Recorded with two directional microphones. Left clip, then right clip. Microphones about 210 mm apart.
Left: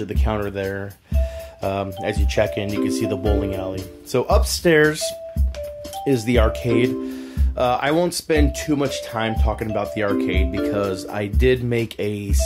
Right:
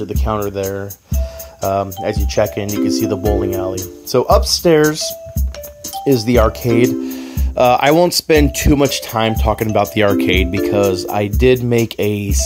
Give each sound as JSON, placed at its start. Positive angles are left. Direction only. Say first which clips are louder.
{"t": 0.1, "sound": "speech", "louder": "right 6 dB", "side_deg": -15}